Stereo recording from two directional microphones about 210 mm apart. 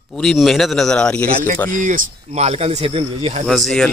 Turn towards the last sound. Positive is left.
turn(degrees=0)  # may be behind; listen again after turning